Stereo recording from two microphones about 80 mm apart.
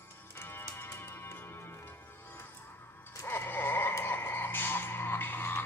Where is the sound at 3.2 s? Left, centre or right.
Left.